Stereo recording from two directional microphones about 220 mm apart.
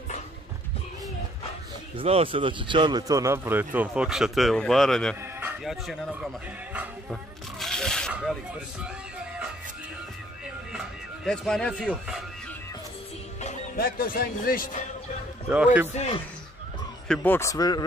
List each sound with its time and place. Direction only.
2.0 s speech: 25° right (ahead or behind); by 5.1 s centre (ahead or behind)
5.2 s music: 10° right (ahead or behind)
10.7 s music: centre (ahead or behind)
13.4 s speech: 35° left (ahead or behind)
15.5 s speech: 5° right (ahead or behind)
17.1 s speech: 10° left (ahead or behind)